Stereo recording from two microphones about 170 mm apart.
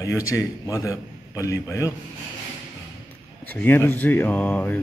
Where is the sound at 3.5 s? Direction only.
10° left (ahead or behind).